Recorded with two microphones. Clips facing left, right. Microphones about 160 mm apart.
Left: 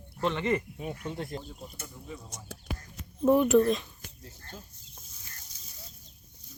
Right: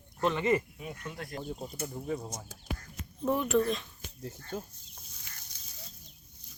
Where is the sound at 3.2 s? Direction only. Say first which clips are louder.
Left 8 dB; 15° left (ahead or behind).